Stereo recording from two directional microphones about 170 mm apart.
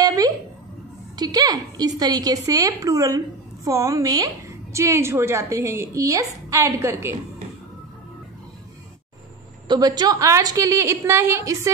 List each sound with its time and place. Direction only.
0.0 s a sound: 20° right (ahead or behind)
1.1 s a woman's voice: 25° right (ahead or behind)
9.7 s a woman's voice: 25° right (ahead or behind)